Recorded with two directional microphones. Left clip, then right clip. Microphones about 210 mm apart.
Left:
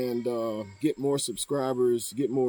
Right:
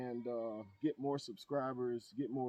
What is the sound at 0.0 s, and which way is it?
Speech, 20° right (ahead or behind).